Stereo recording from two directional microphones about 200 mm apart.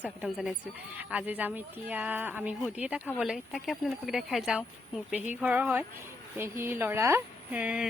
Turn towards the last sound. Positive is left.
turn(degrees=-5)  # may be behind; listen again after turning